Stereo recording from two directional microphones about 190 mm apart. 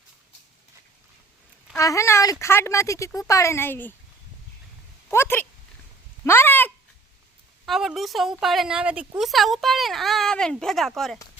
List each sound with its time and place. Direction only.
1.7 s speech: 15° left (ahead or behind)
5.1 s speech: 10° left (ahead or behind)
7.6 s a woman's voice: centre (ahead or behind)